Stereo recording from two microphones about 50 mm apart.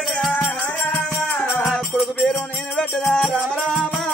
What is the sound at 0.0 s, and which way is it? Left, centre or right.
Music, centre.